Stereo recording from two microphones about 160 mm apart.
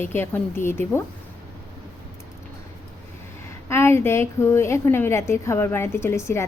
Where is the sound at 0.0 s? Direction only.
15° left (ahead or behind).